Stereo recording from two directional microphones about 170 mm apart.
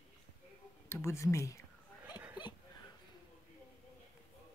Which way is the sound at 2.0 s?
10° right (ahead or behind).